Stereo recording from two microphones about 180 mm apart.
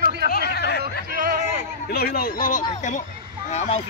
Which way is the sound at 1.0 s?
50° right (ahead or behind).